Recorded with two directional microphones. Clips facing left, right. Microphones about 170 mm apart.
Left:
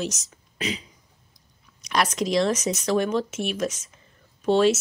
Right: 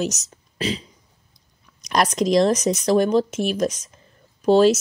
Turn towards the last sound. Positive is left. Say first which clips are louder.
# right 4 dB
turn(degrees=-40)  # may be behind; listen again after turning